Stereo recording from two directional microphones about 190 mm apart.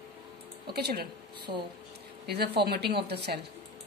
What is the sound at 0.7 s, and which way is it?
Speech, 55° right (ahead or behind).